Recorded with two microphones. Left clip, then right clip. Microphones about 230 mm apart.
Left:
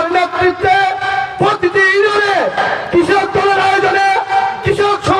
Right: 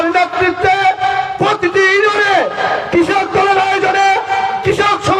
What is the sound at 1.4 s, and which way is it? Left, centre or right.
A man's voice, right.